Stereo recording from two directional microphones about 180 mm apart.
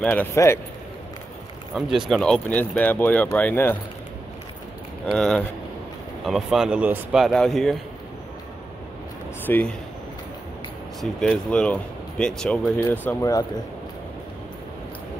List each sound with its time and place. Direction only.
0.0 s speech: 10° left (ahead or behind)
1.7 s speech: centre (ahead or behind)
5.0 s speech: 5° left (ahead or behind)
9.5 s speech: 10° left (ahead or behind)
11.0 s speech: centre (ahead or behind); by 13.5 s 20° left (ahead or behind)